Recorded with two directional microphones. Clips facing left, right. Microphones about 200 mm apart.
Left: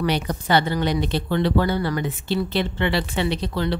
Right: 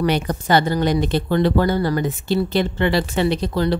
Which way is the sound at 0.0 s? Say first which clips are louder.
Right 3 dB; 50° right (ahead or behind).